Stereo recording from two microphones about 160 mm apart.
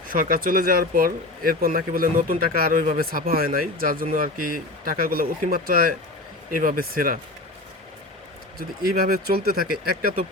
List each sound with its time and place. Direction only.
0.1 s speech: 65° right (ahead or behind)
8.5 s speech: 70° right (ahead or behind)